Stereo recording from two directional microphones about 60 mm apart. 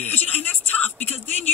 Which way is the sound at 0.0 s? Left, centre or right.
Left.